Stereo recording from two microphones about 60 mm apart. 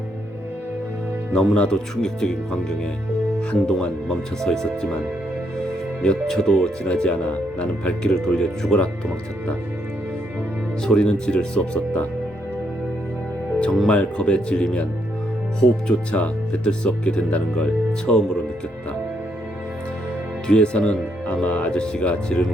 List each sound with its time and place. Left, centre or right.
1.3 s speech: centre
6.0 s speech: centre
8.1 s speech: centre
10.8 s speech: centre
13.8 s speech: centre
20.5 s speech: centre